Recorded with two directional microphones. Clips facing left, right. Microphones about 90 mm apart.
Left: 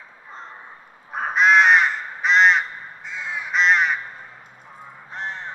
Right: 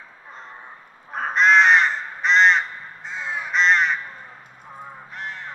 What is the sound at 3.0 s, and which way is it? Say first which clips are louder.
Crow: right 2 dB; 35° right (ahead or behind).